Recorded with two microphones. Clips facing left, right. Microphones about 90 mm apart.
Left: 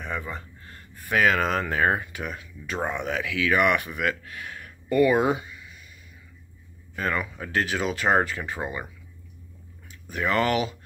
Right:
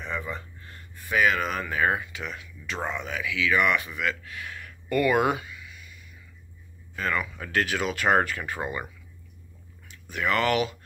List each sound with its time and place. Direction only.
0.0 s a sound: 40° left (ahead or behind)
0.9 s speech: 65° left (ahead or behind); by 1.8 s 85° left
1.8 s speech: 45° left (ahead or behind)
3.0 s speech: 60° left (ahead or behind); by 5.9 s 35° left (ahead or behind)
7.0 s speech: 30° left (ahead or behind)
10.0 s speech: 35° left (ahead or behind)